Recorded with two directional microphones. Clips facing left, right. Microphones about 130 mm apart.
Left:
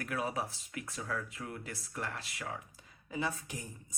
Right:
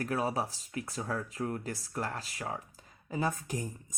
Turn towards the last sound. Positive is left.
turn(degrees=-40)  # may be behind; listen again after turning